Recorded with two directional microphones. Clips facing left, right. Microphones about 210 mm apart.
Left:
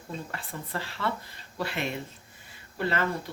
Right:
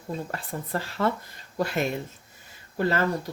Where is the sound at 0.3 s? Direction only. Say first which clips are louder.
Right 5 dB; 40° right (ahead or behind).